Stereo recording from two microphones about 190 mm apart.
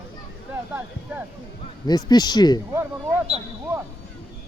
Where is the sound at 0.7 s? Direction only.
10° right (ahead or behind).